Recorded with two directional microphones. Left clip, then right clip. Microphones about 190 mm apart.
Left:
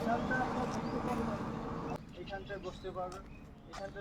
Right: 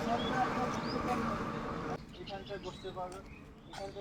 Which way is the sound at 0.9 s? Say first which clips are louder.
Right 2 dB; 50° left (ahead or behind).